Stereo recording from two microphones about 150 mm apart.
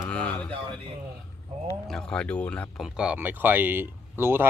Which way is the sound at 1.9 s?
5° left (ahead or behind).